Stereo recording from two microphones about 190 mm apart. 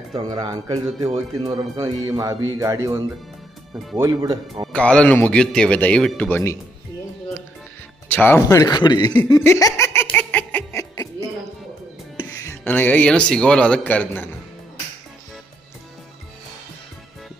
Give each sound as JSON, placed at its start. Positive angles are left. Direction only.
{"t": 0.1, "sound": "speech", "side_deg": -25}
{"t": 4.7, "sound": "a man's voice", "side_deg": 5}
{"t": 8.1, "sound": "a man's voice", "side_deg": 10}
{"t": 9.3, "sound": "laughter", "side_deg": 15}
{"t": 12.2, "sound": "speech", "side_deg": 15}